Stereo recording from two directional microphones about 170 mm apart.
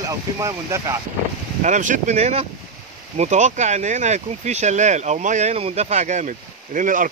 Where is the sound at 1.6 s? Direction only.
45° right (ahead or behind).